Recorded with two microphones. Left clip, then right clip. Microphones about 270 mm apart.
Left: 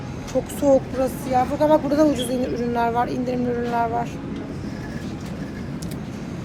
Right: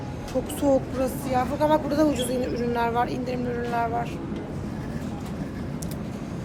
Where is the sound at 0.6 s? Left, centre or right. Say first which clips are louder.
Left 5 dB; centre.